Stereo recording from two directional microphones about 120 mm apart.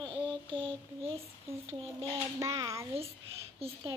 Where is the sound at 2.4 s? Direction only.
25° right (ahead or behind).